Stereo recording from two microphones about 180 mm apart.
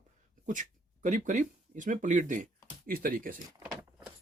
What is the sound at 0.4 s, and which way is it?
Speech, 45° right (ahead or behind).